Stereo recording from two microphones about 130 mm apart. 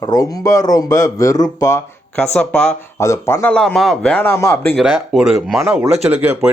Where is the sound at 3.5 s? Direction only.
5° left (ahead or behind).